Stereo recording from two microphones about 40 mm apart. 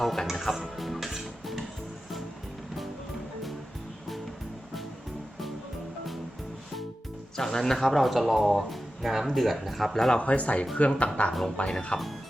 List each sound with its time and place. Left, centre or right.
0.0 s speech: centre
0.8 s music: centre
7.3 s speech: centre
10.2 s speech: left